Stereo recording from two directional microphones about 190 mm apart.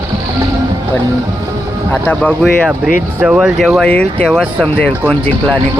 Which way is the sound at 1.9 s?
5° left (ahead or behind).